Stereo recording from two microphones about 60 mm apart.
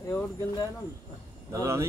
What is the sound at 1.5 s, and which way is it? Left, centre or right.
Speech, right.